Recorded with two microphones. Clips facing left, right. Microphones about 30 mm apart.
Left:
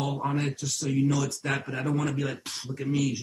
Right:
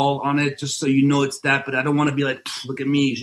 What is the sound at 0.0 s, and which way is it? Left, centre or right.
Speech, right.